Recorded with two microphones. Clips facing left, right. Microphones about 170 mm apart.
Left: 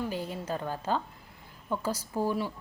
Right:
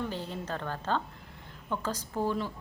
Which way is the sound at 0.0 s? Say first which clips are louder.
Left 2 dB; 10° left (ahead or behind).